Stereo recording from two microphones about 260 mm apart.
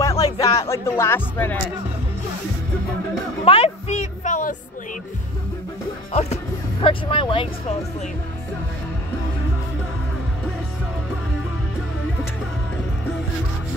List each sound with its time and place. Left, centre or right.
0.0 s speech: centre
3.4 s a sound: left
6.1 s speech: left